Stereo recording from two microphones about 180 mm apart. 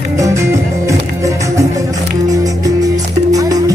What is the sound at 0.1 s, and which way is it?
Music, 15° right (ahead or behind).